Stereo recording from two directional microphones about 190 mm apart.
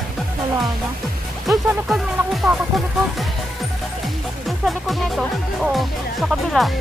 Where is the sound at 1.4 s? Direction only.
Centre (ahead or behind).